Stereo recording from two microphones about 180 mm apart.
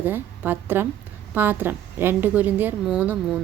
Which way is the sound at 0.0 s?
10° right (ahead or behind).